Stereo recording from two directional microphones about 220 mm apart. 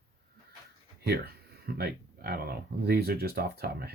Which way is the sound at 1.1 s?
45° right (ahead or behind).